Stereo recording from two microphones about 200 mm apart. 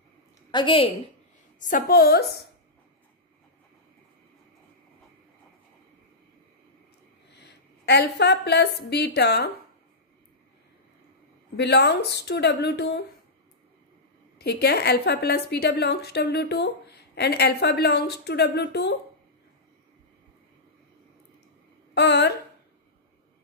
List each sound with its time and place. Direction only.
0.5 s a woman's voice: 25° left (ahead or behind)
1.6 s a woman's voice: 45° left (ahead or behind)
7.3 s a woman's voice: 55° left (ahead or behind)
11.5 s a woman's voice: 55° left (ahead or behind)
14.4 s a woman's voice: 55° left (ahead or behind)
21.9 s speech: 60° left (ahead or behind)